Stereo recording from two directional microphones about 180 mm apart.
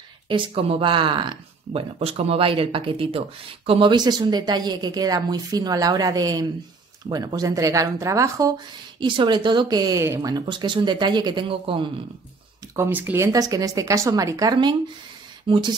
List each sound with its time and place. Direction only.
0.3 s speech: 30° right (ahead or behind)
12.7 s speech: 10° right (ahead or behind)